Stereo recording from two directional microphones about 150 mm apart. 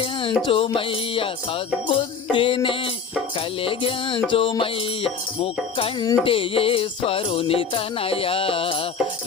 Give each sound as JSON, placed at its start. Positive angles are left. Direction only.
{"t": 0.0, "sound": "music", "side_deg": 35}